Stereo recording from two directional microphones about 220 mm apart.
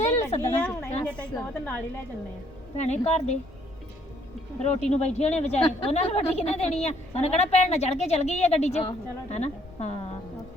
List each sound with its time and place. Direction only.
0.3 s speech: 20° left (ahead or behind)
0.6 s a woman's voice: 10° left (ahead or behind)
2.7 s a woman's voice: 30° left (ahead or behind)
4.6 s speech: 30° left (ahead or behind)